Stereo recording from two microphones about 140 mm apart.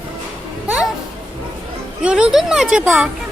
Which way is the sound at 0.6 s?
10° right (ahead or behind).